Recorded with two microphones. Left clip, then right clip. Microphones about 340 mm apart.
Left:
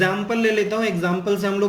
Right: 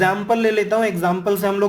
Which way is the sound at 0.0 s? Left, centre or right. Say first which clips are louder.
Right 3 dB; centre.